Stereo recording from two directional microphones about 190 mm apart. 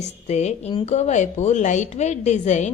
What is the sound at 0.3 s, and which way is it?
A woman's voice, 35° left (ahead or behind).